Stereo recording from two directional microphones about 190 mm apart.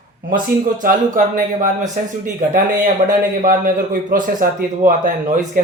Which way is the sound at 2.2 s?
45° right (ahead or behind).